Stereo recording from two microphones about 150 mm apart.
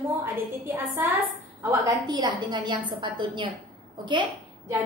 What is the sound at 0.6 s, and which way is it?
Speech, 15° right (ahead or behind).